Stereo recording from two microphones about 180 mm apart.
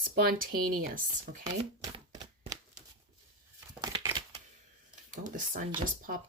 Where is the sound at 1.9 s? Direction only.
20° right (ahead or behind).